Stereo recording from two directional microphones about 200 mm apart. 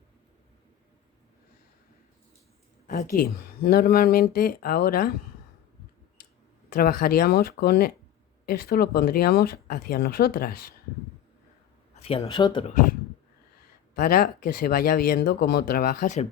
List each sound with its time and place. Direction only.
2.8 s speech: 45° left (ahead or behind)
6.7 s speech: 45° left (ahead or behind)
12.0 s speech: 25° left (ahead or behind)
13.9 s speech: 45° left (ahead or behind)